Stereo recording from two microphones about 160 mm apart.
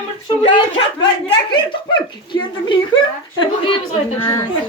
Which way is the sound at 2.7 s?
30° left (ahead or behind).